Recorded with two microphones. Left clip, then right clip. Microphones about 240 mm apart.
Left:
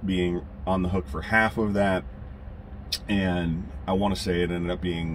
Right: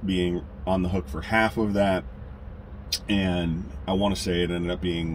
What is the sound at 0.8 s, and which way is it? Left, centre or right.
Speech, centre.